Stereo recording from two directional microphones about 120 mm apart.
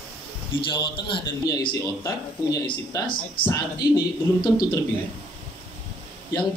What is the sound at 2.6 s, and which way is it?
Speech, 40° left (ahead or behind).